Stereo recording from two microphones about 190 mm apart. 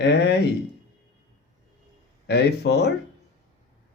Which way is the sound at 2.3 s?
60° left (ahead or behind).